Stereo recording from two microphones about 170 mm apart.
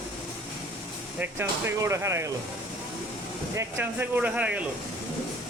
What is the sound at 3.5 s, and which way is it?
Speech, 15° right (ahead or behind).